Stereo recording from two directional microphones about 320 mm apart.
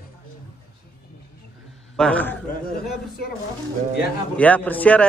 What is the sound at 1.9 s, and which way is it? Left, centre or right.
Speech, centre.